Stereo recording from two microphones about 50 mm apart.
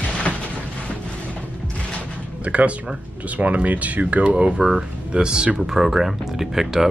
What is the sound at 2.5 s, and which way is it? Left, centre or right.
Speech, right.